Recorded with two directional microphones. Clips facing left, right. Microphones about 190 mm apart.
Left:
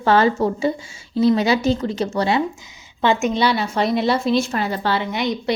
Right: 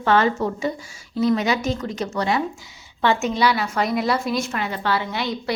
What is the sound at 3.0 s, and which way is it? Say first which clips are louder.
A woman's voice: left 2 dB; 20° left (ahead or behind).